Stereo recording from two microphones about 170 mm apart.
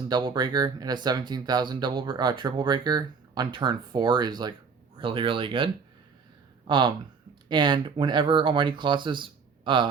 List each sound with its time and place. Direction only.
0.1 s speech: 25° right (ahead or behind)